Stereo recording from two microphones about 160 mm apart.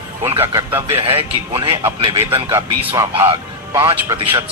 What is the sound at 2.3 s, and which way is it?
Speech, 20° right (ahead or behind).